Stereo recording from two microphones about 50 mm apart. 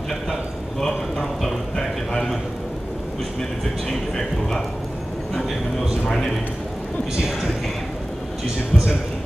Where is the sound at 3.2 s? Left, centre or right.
Centre.